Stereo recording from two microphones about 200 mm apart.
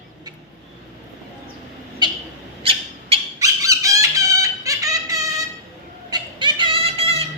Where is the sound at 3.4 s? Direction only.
15° right (ahead or behind).